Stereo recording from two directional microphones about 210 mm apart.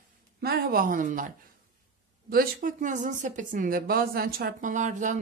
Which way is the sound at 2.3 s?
40° right (ahead or behind).